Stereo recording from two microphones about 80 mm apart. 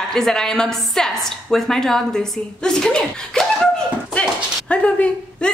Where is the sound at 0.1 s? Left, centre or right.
Centre.